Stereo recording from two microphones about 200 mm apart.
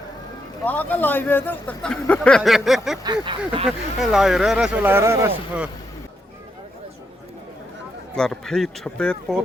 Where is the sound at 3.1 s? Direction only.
25° right (ahead or behind).